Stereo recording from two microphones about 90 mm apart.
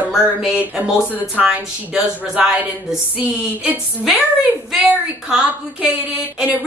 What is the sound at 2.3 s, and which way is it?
Speech, 10° right (ahead or behind).